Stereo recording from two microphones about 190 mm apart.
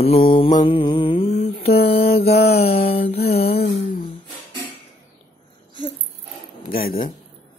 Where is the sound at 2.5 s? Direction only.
30° left (ahead or behind).